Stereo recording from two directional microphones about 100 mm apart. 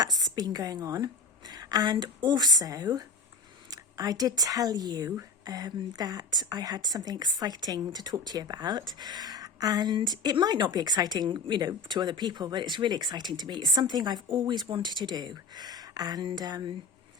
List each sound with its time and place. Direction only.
0.0 s a woman's voice: 40° right (ahead or behind)